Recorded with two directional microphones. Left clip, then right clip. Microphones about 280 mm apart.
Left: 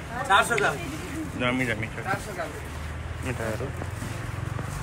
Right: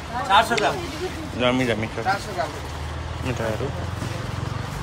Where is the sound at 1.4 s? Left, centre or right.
Centre.